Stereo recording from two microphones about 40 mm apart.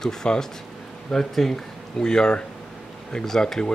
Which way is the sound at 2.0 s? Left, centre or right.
Centre.